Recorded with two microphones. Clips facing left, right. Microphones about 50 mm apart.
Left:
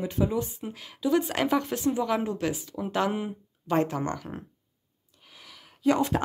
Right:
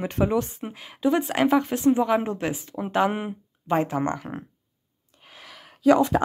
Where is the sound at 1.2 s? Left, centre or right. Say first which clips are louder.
Right 5 dB; centre.